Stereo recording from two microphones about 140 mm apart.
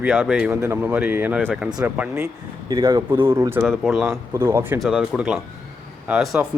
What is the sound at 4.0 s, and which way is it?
Speech, 20° right (ahead or behind).